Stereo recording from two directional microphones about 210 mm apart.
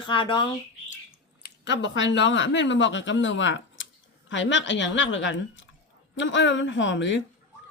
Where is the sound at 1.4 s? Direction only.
55° left (ahead or behind).